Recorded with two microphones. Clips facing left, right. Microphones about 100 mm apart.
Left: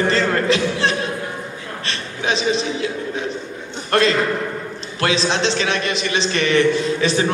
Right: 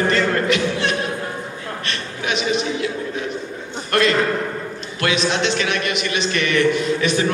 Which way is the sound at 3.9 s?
30° left (ahead or behind).